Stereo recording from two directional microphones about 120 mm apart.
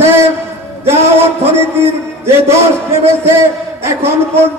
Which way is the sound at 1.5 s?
20° right (ahead or behind).